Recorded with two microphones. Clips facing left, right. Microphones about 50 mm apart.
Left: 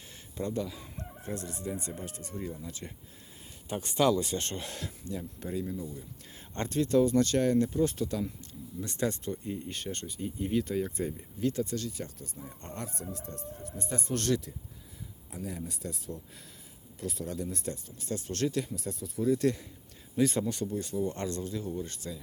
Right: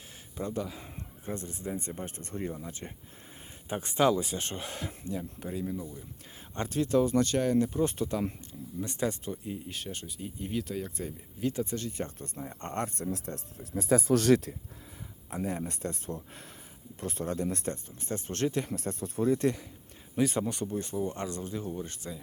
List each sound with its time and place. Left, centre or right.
0.3 s speech: centre
2.0 s speech: right
3.7 s speech: centre
5.7 s speech: right
6.5 s speech: centre
11.3 s speech: centre
11.6 s speech: right
14.5 s speech: right
15.3 s speech: right
17.4 s speech: right
17.8 s speech: right
18.7 s speech: right
19.3 s speech: right
21.2 s speech: centre